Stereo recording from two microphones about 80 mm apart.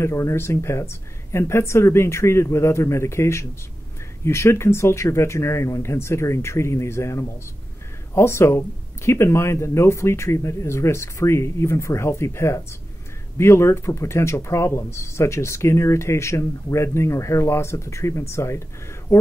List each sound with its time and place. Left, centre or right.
0.0 s speech: left